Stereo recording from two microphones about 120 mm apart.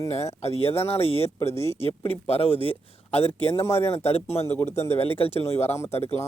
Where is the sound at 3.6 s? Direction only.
20° left (ahead or behind).